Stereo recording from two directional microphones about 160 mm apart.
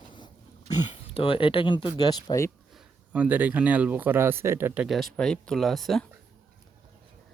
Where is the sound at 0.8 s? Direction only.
35° left (ahead or behind).